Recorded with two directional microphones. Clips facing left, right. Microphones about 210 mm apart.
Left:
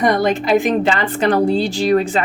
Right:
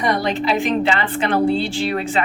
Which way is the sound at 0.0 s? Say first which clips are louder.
Left 4 dB; 50° left (ahead or behind).